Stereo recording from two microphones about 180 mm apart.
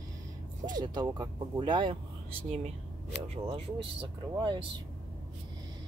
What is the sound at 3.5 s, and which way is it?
Speech, 30° right (ahead or behind).